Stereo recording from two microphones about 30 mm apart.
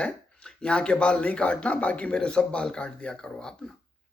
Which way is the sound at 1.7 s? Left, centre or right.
Left.